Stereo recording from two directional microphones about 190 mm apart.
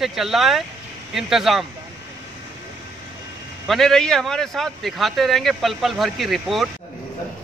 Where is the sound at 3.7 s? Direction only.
Centre (ahead or behind).